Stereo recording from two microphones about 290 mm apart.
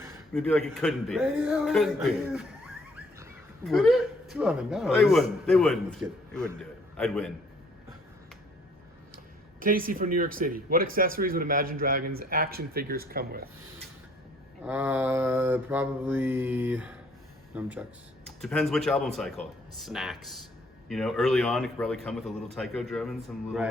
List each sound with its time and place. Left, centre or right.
0.3 s a man's voice: centre
3.7 s a man's voice: centre
9.1 s a sound: right
10.2 s a man's voice: right
14.6 s mantra: centre
17.5 s a man's voice: centre